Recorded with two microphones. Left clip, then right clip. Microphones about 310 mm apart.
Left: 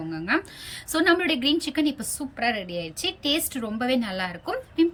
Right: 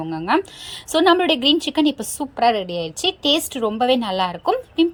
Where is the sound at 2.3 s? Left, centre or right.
Right.